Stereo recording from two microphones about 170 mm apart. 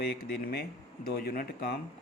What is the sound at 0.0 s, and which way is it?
Speech, 65° left (ahead or behind).